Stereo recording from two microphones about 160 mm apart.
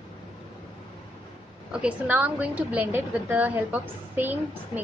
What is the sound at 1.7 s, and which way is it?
A woman's voice, 5° right (ahead or behind).